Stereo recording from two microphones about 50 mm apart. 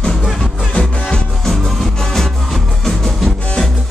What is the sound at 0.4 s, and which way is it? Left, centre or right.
Music, centre.